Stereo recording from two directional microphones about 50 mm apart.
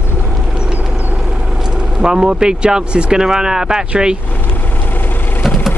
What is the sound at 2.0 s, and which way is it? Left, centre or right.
Speech, centre.